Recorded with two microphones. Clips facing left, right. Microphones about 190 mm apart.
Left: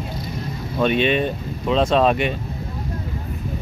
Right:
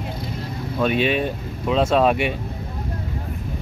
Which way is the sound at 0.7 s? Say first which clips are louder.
Left 2 dB; 5° right (ahead or behind).